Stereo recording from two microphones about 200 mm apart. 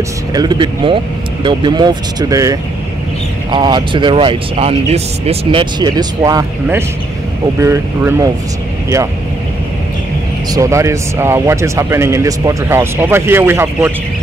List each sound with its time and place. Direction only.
0.3 s speech: 20° right (ahead or behind)
10.5 s speech: 15° right (ahead or behind)